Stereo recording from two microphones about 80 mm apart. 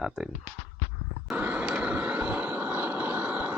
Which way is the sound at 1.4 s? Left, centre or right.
Right.